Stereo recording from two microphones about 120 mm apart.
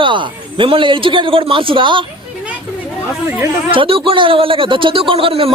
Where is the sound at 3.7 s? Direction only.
50° right (ahead or behind).